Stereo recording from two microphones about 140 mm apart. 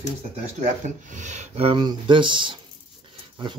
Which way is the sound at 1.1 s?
60° right (ahead or behind).